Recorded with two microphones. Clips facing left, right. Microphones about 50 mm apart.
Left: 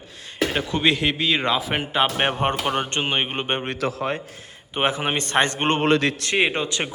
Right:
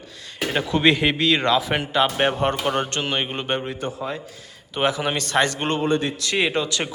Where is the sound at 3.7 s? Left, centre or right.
Left.